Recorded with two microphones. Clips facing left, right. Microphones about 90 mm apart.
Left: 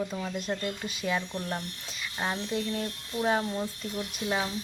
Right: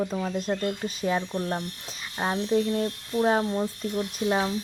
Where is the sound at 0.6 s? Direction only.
40° right (ahead or behind).